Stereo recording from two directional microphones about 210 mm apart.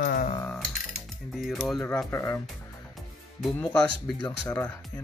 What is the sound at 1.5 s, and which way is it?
Speech, 10° left (ahead or behind).